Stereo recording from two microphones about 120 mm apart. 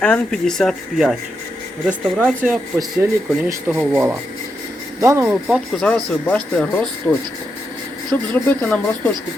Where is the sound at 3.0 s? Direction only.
20° right (ahead or behind).